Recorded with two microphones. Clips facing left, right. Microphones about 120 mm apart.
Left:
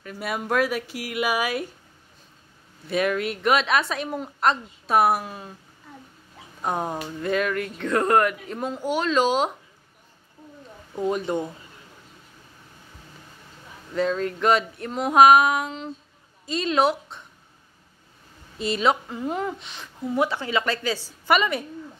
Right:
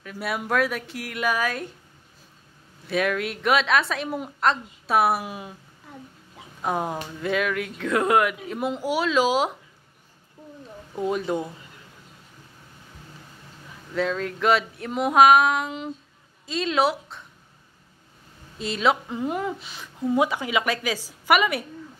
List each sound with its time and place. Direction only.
0.0 s speech: centre (ahead or behind)
2.9 s speech: centre (ahead or behind)
6.6 s speech: centre (ahead or behind)
11.0 s speech: centre (ahead or behind)
13.9 s a woman's voice: centre (ahead or behind)
15.1 s speech: centre (ahead or behind)
18.6 s speech: centre (ahead or behind)
19.0 s a woman's voice: 20° right (ahead or behind)
19.3 s a woman's voice: 5° right (ahead or behind)